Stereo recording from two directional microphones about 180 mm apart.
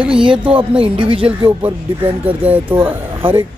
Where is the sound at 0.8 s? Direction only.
30° right (ahead or behind).